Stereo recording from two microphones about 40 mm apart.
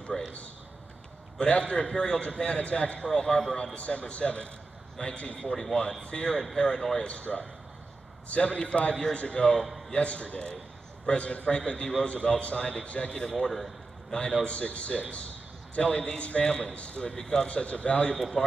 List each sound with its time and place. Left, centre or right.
0.1 s a sound: centre
1.4 s a man's voice: left
3.2 s a man's voice: centre
3.7 s a man's voice: left
5.5 s a man's voice: centre
6.0 s a man's voice: left
9.6 s a man's voice: centre
9.9 s a man's voice: left
13.3 s a man's voice: centre
14.1 s a man's voice: left
17.1 s a man's voice: centre
17.5 s a man's voice: left
18.1 s a man's voice: centre